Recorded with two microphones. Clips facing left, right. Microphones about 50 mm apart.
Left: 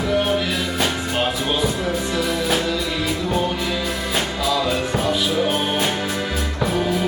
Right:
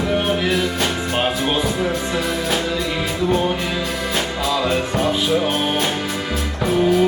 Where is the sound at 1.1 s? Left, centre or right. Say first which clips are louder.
Right 2 dB; centre.